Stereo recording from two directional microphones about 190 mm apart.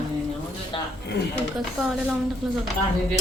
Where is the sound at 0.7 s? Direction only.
25° left (ahead or behind).